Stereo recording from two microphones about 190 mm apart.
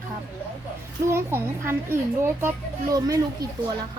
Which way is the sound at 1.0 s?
15° right (ahead or behind).